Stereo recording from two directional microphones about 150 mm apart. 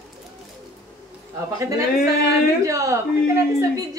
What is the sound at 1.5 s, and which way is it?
A woman's voice, 20° right (ahead or behind).